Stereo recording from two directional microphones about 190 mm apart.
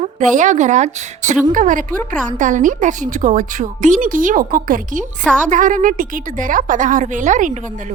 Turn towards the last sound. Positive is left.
turn(degrees=-40)  # may be behind; listen again after turning